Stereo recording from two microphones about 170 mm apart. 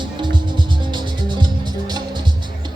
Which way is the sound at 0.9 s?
25° right (ahead or behind).